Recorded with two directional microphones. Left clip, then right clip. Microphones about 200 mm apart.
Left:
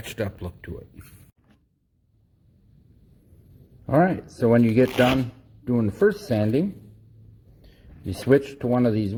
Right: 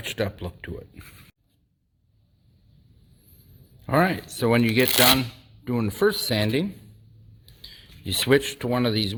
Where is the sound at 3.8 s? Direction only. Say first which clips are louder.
Left 1 dB; 15° right (ahead or behind).